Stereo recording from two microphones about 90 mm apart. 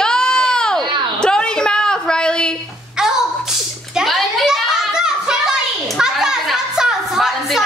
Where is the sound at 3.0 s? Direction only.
5° right (ahead or behind).